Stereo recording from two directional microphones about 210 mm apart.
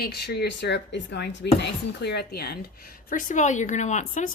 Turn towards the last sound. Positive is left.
turn(degrees=35)  # may be behind; listen again after turning